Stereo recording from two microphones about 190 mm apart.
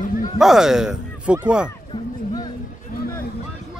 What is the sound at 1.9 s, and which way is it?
Music, 20° left (ahead or behind).